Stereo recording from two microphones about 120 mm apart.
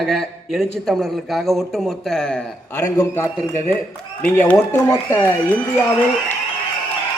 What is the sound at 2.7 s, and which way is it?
A man's voice, 20° left (ahead or behind).